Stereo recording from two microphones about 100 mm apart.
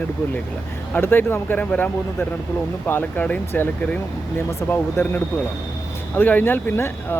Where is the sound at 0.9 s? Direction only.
20° left (ahead or behind).